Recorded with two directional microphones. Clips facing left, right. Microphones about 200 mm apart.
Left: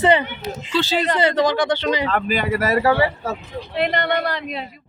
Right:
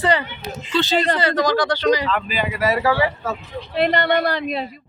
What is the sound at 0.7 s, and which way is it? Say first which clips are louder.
Speech: right 1 dB; 10° left (ahead or behind).